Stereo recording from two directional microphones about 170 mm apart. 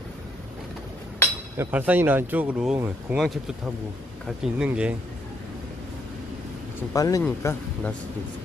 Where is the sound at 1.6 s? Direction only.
10° right (ahead or behind).